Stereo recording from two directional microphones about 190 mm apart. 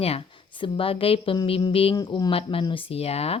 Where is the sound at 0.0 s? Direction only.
30° left (ahead or behind).